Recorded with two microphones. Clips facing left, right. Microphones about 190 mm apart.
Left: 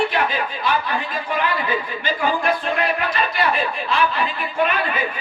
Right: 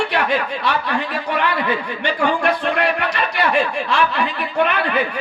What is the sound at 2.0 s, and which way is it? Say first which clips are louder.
Speech: right 4 dB; 75° right (ahead or behind).